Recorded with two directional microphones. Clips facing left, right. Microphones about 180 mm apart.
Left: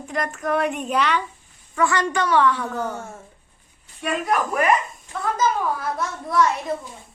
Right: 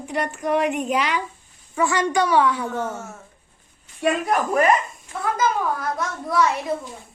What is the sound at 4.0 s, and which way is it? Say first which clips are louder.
Speech: right 2 dB; 35° right (ahead or behind).